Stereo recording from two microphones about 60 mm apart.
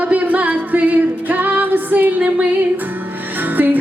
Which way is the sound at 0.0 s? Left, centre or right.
Right.